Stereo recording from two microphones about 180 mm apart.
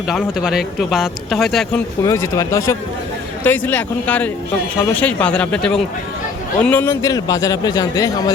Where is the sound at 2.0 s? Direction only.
15° left (ahead or behind).